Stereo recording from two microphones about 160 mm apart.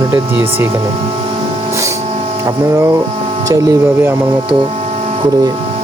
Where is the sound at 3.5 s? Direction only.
20° right (ahead or behind).